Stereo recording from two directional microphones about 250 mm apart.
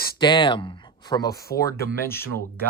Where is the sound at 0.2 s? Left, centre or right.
Centre.